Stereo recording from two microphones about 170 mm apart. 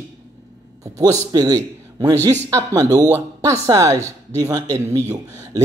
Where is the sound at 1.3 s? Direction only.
20° right (ahead or behind).